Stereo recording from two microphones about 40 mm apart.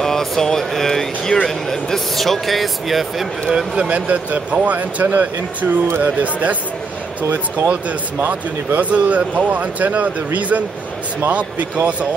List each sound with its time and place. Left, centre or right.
0.0 s speech: centre
3.5 s speech: right
4.1 s speech: right
8.2 s speech: right